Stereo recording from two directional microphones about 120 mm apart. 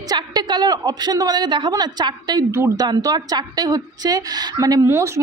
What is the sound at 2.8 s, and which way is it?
A woman's voice, 30° right (ahead or behind).